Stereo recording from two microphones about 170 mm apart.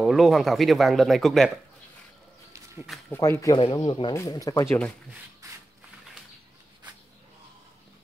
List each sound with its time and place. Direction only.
0.0 s speech: centre (ahead or behind)
3.1 s speech: 15° left (ahead or behind)
3.6 s speech: 30° left (ahead or behind)
4.1 s speech: 20° left (ahead or behind)